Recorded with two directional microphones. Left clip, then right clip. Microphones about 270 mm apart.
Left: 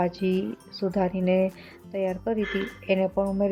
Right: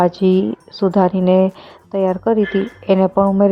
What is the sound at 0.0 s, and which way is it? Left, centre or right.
Speech, right.